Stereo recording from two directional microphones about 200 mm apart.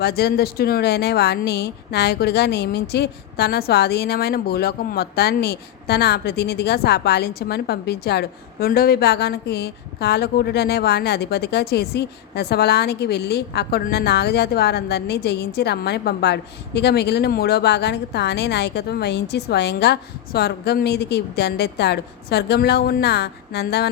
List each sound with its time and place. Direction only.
0.0 s a woman's voice: 55° left (ahead or behind)